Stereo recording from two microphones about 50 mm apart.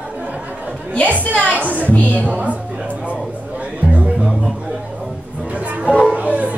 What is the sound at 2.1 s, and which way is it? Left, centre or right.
Speech, right.